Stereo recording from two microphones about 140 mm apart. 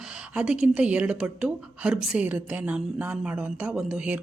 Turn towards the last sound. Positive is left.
turn(degrees=-10)  # may be behind; listen again after turning